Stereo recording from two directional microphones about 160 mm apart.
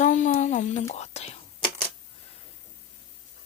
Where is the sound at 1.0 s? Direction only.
45° left (ahead or behind).